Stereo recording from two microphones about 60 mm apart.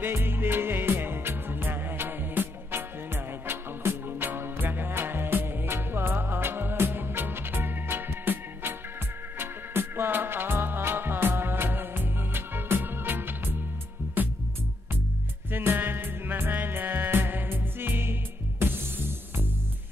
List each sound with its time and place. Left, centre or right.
0.0 s music: right
15.5 s music: right